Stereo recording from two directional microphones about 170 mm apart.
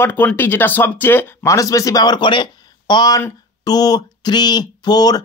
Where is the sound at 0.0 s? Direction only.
10° left (ahead or behind).